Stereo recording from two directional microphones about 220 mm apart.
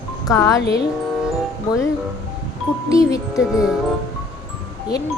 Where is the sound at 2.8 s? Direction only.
15° left (ahead or behind).